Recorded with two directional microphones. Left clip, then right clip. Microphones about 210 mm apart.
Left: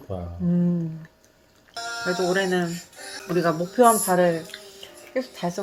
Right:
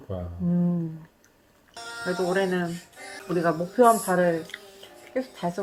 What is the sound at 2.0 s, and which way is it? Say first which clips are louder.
Speech: left 2 dB; 25° left (ahead or behind).